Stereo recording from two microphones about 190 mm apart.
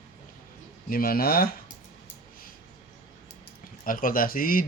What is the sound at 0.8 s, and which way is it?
Speech, 50° left (ahead or behind).